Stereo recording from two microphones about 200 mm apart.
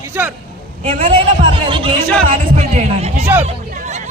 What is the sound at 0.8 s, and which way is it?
A man's voice, 30° right (ahead or behind).